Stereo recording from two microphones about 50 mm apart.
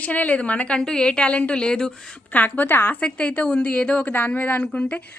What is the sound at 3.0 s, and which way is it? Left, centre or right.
A woman's voice, left.